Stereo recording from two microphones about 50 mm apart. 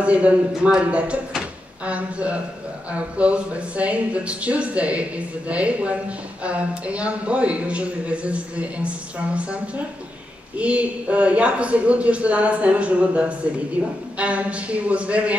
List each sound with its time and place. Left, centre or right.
0.0 s speech: right
10.6 s speech: right